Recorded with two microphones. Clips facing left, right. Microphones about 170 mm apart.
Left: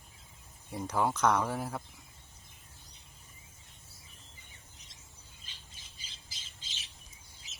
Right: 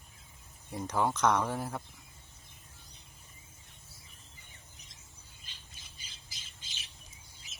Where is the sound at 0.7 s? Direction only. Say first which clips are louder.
Even; 5° left (ahead or behind).